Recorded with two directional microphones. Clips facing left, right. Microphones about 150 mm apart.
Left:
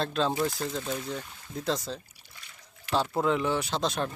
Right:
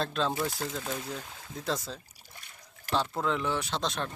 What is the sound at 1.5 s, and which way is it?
Speech, centre (ahead or behind).